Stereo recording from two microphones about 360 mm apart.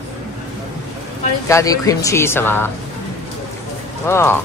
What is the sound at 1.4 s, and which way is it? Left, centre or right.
Speech, centre.